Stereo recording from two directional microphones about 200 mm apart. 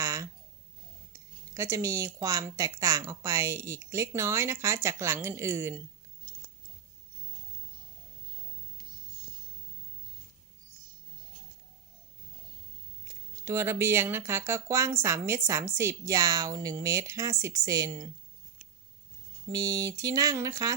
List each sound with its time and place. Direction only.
0.0 s a sound: 15° right (ahead or behind)
1.5 s speech: 15° right (ahead or behind)
13.1 s speech: 15° right (ahead or behind)
19.5 s speech: 20° right (ahead or behind)